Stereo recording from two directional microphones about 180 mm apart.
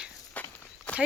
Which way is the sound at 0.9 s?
5° left (ahead or behind).